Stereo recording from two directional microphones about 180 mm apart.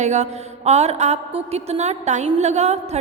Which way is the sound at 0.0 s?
40° right (ahead or behind).